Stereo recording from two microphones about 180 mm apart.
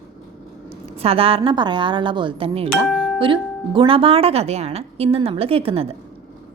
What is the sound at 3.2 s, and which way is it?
Speech, 30° right (ahead or behind).